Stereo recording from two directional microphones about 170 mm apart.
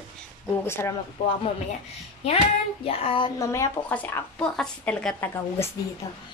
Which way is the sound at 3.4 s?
15° left (ahead or behind).